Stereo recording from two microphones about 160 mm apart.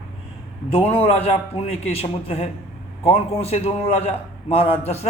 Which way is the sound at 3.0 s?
35° left (ahead or behind).